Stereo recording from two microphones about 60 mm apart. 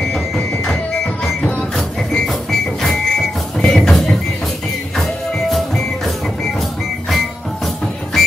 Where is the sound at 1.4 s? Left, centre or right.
Left.